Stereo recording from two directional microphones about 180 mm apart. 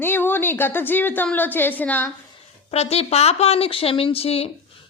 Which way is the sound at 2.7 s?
35° left (ahead or behind).